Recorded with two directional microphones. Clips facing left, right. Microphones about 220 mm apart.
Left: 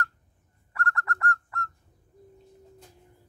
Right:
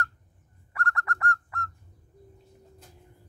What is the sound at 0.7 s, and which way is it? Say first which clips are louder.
Bird: left 1 dB; 15° right (ahead or behind).